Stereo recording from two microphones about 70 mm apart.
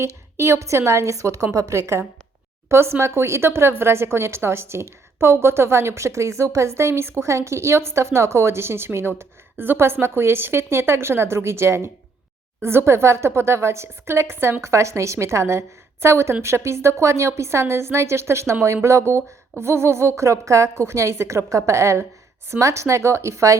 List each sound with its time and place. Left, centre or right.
0.0 s speech: right